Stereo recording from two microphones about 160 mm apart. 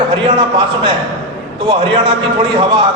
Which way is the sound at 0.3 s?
30° right (ahead or behind).